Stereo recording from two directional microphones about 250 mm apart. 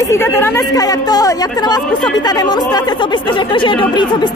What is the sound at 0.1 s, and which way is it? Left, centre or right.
Speech, centre.